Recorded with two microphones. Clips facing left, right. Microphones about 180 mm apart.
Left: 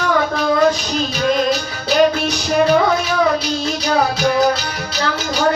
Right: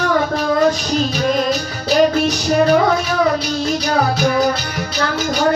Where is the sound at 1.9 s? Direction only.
40° right (ahead or behind).